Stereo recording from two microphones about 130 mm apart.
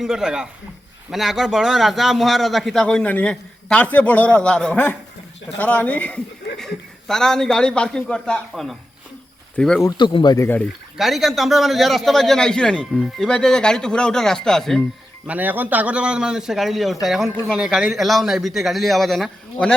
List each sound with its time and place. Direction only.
0.0 s a man's voice: 5° right (ahead or behind)
10.0 s speech: 35° left (ahead or behind)
10.4 s speech: 15° left (ahead or behind)
10.9 s a man's voice: centre (ahead or behind)
15.3 s a man's voice: 15° right (ahead or behind); by 19.7 s 5° left (ahead or behind)